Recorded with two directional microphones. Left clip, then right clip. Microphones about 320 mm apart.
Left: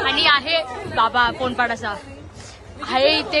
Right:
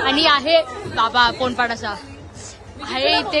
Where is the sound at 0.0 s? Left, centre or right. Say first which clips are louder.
Right 1 dB; centre.